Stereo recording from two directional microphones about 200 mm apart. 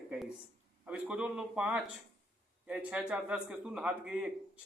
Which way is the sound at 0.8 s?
5° right (ahead or behind).